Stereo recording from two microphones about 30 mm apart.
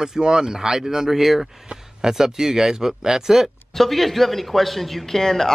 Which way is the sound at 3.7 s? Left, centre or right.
Centre.